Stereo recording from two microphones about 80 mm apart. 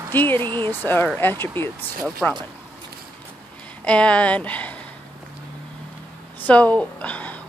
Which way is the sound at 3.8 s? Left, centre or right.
Centre.